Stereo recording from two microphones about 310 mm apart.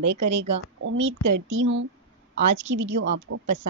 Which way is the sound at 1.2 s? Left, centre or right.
Right.